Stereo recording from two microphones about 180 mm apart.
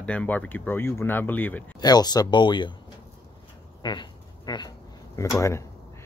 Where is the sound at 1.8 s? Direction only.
20° left (ahead or behind).